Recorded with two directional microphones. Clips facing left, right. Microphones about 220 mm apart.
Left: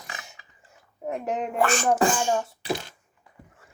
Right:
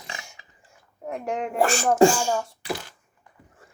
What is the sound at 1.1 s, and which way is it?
Speech, 5° left (ahead or behind).